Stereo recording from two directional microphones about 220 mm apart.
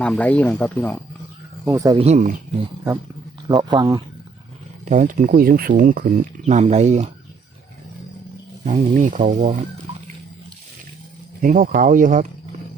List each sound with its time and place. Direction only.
0.0 s speech: 5° left (ahead or behind)
1.6 s speech: 15° right (ahead or behind)
2.0 s speech: 35° right (ahead or behind)
3.5 s speech: 20° right (ahead or behind)
4.9 s speech: 35° right (ahead or behind)
8.6 s speech: 35° right (ahead or behind)
11.4 s speech: 40° right (ahead or behind)